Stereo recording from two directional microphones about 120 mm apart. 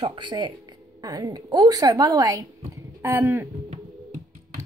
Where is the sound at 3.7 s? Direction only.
70° right (ahead or behind).